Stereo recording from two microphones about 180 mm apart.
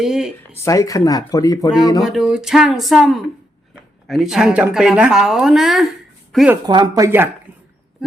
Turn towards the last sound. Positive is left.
turn(degrees=-15)  # may be behind; listen again after turning